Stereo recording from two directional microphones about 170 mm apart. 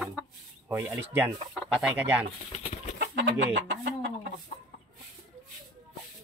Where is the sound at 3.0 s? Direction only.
90° right.